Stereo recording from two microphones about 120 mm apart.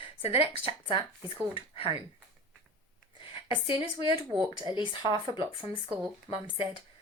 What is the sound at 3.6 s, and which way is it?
Speech, 45° left (ahead or behind).